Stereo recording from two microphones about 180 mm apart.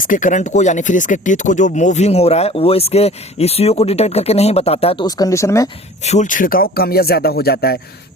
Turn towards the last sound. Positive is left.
turn(degrees=60)  # may be behind; listen again after turning